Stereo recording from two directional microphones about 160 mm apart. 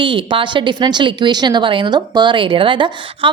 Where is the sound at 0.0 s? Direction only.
30° right (ahead or behind).